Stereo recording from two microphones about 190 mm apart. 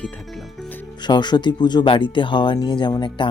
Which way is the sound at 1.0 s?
25° left (ahead or behind).